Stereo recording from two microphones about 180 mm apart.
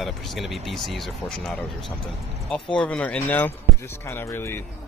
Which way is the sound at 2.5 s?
5° left (ahead or behind).